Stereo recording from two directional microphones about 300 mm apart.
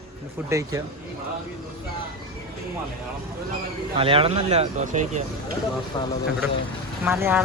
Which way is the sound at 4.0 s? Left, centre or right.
Centre.